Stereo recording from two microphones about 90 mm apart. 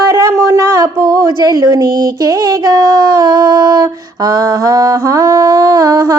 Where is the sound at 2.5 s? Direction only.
40° right (ahead or behind).